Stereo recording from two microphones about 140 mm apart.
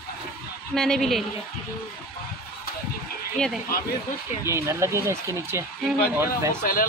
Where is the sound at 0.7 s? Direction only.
5° left (ahead or behind).